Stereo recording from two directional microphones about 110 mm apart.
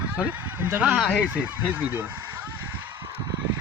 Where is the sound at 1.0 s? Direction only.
5° left (ahead or behind).